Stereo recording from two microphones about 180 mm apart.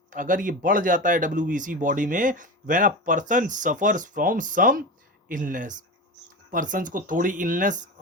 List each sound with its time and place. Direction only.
0.1 s speech: 45° right (ahead or behind)